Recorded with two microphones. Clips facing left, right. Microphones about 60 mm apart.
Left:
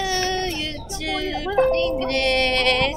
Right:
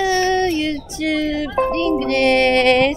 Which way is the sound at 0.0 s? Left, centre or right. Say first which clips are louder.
Right 7 dB; right.